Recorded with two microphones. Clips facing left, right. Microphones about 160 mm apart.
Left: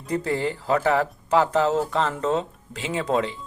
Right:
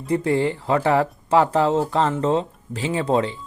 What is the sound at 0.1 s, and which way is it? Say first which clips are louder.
Speech: right 5 dB; 25° right (ahead or behind).